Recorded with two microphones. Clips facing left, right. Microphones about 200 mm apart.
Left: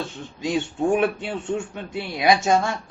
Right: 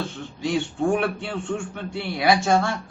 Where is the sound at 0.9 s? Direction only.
20° left (ahead or behind).